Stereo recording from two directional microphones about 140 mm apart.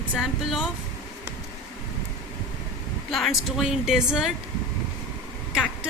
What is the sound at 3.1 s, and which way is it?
A woman's voice, centre (ahead or behind).